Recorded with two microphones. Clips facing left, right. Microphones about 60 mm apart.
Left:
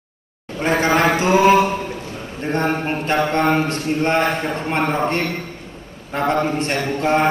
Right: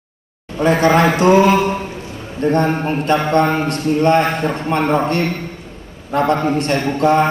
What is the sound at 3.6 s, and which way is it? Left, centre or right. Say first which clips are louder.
A man's voice: right 5 dB; right.